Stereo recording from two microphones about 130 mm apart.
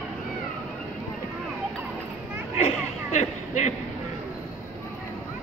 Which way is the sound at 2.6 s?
65° left (ahead or behind).